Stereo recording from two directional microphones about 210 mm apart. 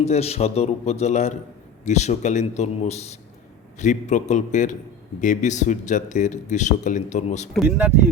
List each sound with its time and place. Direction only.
0.0 s a man's voice: 30° left (ahead or behind)
7.5 s speech: 5° right (ahead or behind)